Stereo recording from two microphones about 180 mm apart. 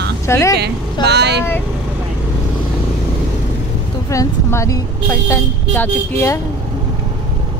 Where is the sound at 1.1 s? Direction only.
65° right (ahead or behind).